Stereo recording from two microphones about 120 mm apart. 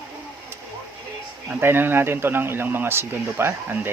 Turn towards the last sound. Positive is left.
turn(degrees=-20)  # may be behind; listen again after turning